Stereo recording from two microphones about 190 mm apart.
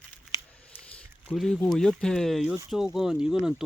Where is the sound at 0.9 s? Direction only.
5° left (ahead or behind).